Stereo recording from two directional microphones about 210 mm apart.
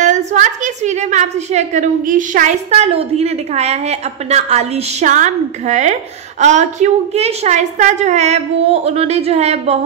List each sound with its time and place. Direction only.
0.0 s a woman's voice: 35° right (ahead or behind)